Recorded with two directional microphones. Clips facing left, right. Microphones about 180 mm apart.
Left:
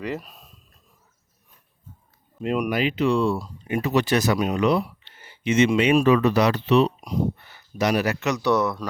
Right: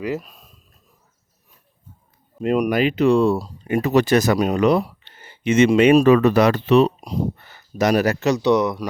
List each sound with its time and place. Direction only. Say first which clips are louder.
0.0 s speech: right 4 dB; 5° right (ahead or behind)
2.4 s speech: right 5 dB; 45° right (ahead or behind)
8.4 s speech: right 2 dB; 15° right (ahead or behind)